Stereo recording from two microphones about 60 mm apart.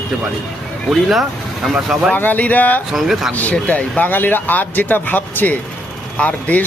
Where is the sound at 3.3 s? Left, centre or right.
Left.